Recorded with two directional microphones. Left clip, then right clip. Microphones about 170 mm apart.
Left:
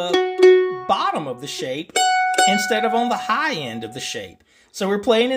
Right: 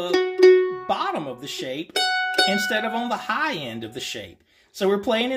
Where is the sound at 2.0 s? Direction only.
20° left (ahead or behind).